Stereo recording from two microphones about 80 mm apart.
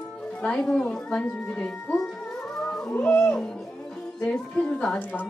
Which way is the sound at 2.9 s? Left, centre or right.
Left.